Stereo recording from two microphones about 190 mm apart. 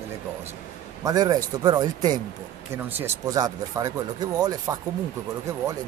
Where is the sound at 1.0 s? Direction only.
20° right (ahead or behind).